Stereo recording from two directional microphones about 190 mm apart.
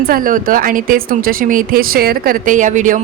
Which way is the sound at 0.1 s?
45° right (ahead or behind).